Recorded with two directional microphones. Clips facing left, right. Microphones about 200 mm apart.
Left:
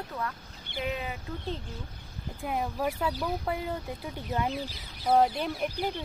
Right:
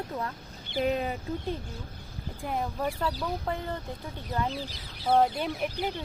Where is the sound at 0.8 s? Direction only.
40° right (ahead or behind).